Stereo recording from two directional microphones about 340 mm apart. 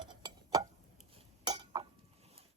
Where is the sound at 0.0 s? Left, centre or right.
Centre.